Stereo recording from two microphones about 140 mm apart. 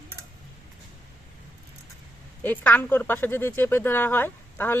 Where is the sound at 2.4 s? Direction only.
10° left (ahead or behind).